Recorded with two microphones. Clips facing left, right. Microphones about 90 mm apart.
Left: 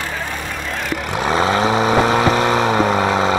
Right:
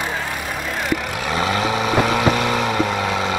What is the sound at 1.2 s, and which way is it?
Vehicle, 30° left (ahead or behind).